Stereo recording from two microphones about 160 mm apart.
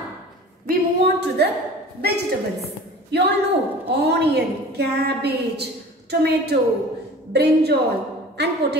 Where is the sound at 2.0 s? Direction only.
80° right.